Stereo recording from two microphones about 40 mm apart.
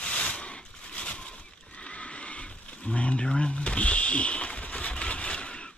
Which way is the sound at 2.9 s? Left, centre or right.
Left.